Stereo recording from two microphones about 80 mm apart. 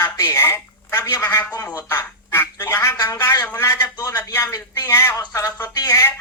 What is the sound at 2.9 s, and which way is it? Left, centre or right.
Speech, left.